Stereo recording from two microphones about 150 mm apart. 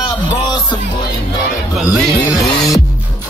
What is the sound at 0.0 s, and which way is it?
Music, 30° left (ahead or behind).